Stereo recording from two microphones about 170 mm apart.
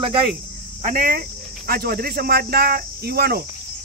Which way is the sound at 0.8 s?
55° right (ahead or behind).